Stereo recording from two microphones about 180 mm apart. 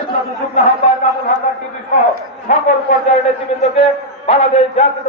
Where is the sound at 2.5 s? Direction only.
40° left (ahead or behind).